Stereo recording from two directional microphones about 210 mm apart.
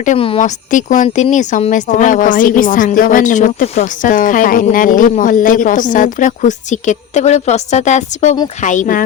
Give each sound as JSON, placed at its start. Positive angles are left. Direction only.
{"t": 0.0, "sound": "speech", "side_deg": 30}